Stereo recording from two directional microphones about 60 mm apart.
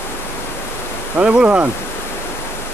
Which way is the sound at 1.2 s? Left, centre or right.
Right.